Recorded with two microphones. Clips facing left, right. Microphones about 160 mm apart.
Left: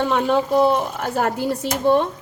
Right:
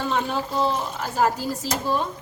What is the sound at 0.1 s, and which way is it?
Speech, 60° left (ahead or behind).